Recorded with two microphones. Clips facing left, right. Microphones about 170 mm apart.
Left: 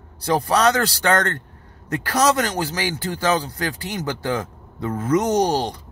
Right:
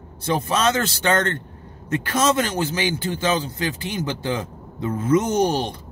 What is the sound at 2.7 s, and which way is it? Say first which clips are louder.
Speech: right 2 dB; 20° right (ahead or behind).